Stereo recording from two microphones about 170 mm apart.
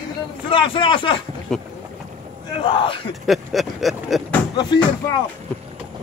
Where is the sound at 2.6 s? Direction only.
30° left (ahead or behind).